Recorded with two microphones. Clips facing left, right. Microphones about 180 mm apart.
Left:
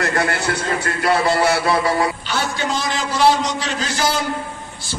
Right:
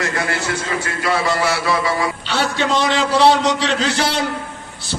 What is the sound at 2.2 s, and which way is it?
A man's voice, 70° right (ahead or behind).